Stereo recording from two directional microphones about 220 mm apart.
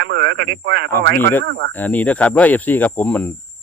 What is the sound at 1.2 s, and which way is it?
Speech, 10° left (ahead or behind).